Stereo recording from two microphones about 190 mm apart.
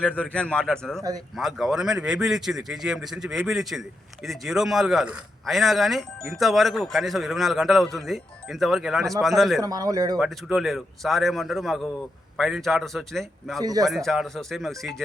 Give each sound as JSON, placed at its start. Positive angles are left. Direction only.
{"t": 0.0, "sound": "speech", "side_deg": 5}
{"t": 9.6, "sound": "a man's voice", "side_deg": -20}
{"t": 10.2, "sound": "speech", "side_deg": 0}
{"t": 13.6, "sound": "a man's voice", "side_deg": -20}
{"t": 13.8, "sound": "speech", "side_deg": 0}